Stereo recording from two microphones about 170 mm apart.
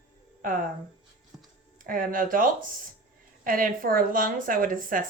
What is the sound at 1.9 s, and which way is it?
Speech, 55° right (ahead or behind).